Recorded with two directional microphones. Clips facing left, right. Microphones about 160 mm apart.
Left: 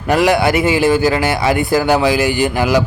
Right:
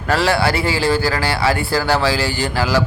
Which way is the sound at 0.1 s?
15° left (ahead or behind).